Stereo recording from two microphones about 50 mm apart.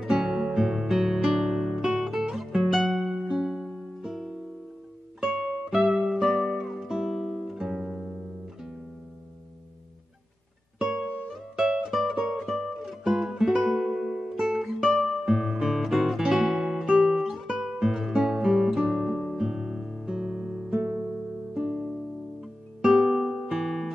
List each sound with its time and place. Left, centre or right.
0.0 s music: centre
5.2 s music: centre
11.5 s music: centre
14.3 s guitar: centre
20.1 s music: centre
20.8 s music: right; by 23.9 s centre